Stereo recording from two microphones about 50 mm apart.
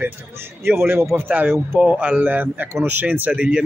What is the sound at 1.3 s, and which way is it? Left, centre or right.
Speech, right.